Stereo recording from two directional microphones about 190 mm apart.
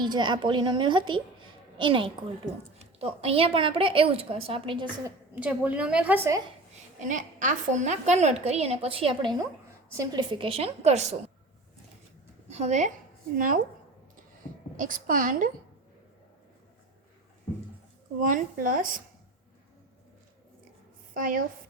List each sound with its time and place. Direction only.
0.0 s a woman's voice: 25° right (ahead or behind)
5.3 s a woman's voice: 5° right (ahead or behind)
7.0 s a woman's voice: 40° right (ahead or behind)
12.5 s a woman's voice: 35° right (ahead or behind)
14.8 s a woman's voice: 45° right (ahead or behind)
18.2 s a woman's voice: 45° right (ahead or behind)
21.1 s a woman's voice: 45° right (ahead or behind)